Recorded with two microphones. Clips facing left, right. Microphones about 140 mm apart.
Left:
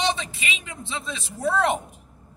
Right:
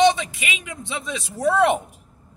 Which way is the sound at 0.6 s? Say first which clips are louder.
Right 2 dB; 15° right (ahead or behind).